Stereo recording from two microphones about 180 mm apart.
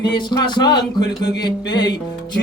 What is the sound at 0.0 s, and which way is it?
Speech, 25° left (ahead or behind).